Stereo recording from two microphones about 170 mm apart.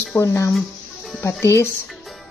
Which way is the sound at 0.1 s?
15° left (ahead or behind).